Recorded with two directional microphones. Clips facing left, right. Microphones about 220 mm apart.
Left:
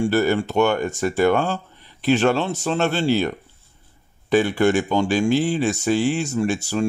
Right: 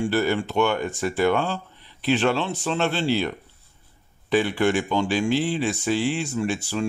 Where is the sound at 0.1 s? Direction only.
45° left (ahead or behind).